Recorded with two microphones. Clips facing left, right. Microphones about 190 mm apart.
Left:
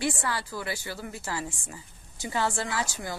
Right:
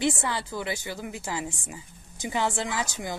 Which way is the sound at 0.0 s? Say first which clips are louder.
Right 3 dB; 20° right (ahead or behind).